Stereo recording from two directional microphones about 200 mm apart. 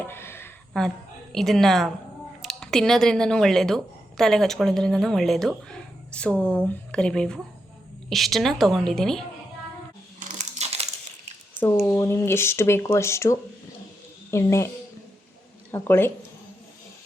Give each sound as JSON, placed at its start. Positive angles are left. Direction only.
{"t": 0.0, "sound": "a sound", "side_deg": 10}
{"t": 0.7, "sound": "a woman's voice", "side_deg": 0}
{"t": 10.2, "sound": "crumpling", "side_deg": -35}
{"t": 11.9, "sound": "speech", "side_deg": 15}
{"t": 15.7, "sound": "speech", "side_deg": 10}